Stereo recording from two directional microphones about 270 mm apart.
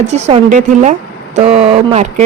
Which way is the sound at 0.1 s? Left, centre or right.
Right.